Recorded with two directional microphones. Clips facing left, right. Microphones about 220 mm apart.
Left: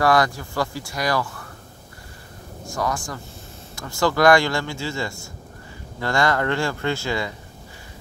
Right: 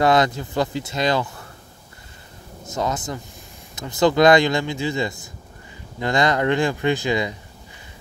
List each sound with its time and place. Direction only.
0.0 s speech: 20° right (ahead or behind)
2.6 s speech: 20° right (ahead or behind)